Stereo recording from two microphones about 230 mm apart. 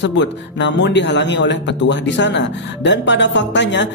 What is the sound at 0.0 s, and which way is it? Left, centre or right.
Speech, left.